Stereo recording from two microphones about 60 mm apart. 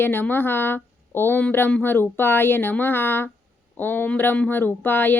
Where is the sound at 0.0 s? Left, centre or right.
Left.